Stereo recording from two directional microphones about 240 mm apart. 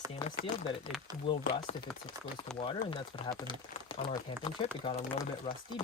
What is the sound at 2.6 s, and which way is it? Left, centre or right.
Speech, left.